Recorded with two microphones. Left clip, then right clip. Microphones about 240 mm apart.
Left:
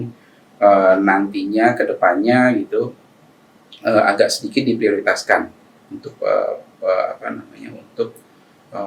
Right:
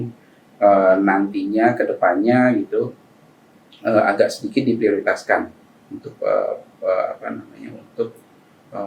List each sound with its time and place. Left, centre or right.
0.6 s speech: centre
3.8 s speech: centre